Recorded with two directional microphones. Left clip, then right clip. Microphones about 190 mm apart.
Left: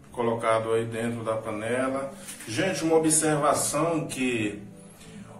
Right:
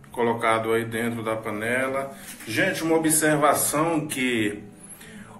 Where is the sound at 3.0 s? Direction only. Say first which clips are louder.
Right 3 dB; 25° right (ahead or behind).